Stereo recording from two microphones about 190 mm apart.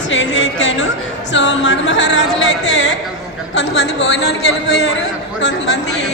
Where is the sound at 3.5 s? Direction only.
65° left (ahead or behind).